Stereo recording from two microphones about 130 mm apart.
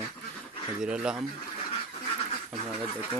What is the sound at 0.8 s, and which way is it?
Speech, 5° right (ahead or behind).